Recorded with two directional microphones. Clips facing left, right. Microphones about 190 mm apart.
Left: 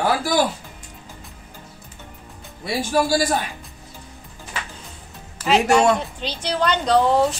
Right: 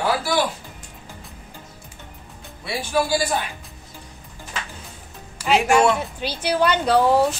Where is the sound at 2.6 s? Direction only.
40° left (ahead or behind).